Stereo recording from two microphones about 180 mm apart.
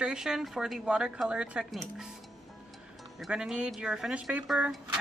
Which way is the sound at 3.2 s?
5° right (ahead or behind).